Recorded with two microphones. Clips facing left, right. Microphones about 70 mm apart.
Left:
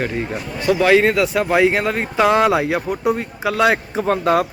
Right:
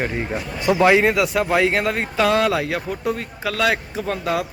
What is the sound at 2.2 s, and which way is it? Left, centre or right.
Speech, centre.